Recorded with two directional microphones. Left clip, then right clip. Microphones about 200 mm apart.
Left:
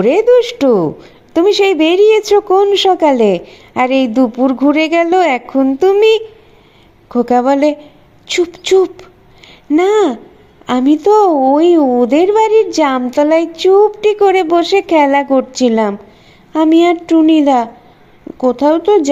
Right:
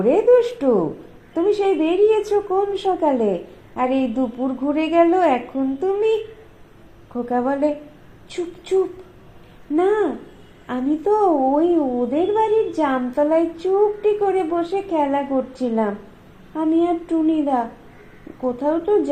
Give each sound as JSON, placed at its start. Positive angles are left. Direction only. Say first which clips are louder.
{"t": 0.0, "sound": "a woman's voice", "louder": "left 6 dB", "side_deg": 35}
{"t": 4.8, "sound": "a woman's voice", "louder": "left 2 dB", "side_deg": 65}
{"t": 5.1, "sound": "a woman's voice", "louder": "left 7 dB", "side_deg": 35}
{"t": 7.1, "sound": "a woman's voice", "louder": "left 11 dB", "side_deg": 40}